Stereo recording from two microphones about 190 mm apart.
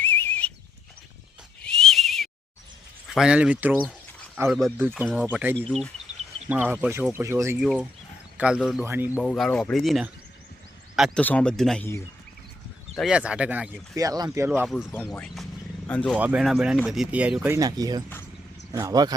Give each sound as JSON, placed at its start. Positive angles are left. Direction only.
{"t": 0.0, "sound": "livestock", "side_deg": 10}
{"t": 1.6, "sound": "neigh", "side_deg": 5}
{"t": 3.1, "sound": "speech", "side_deg": -5}
{"t": 3.7, "sound": "speech", "side_deg": 5}
{"t": 4.8, "sound": "speech", "side_deg": -10}
{"t": 5.5, "sound": "speech", "side_deg": 5}
{"t": 6.5, "sound": "speech", "side_deg": -10}
{"t": 7.6, "sound": "speech", "side_deg": -5}
{"t": 9.2, "sound": "speech", "side_deg": 5}
{"t": 13.0, "sound": "speech", "side_deg": -5}
{"t": 13.9, "sound": "speech", "side_deg": -20}
{"t": 14.7, "sound": "speech", "side_deg": 0}
{"t": 16.1, "sound": "speech", "side_deg": -5}
{"t": 17.6, "sound": "speech", "side_deg": -20}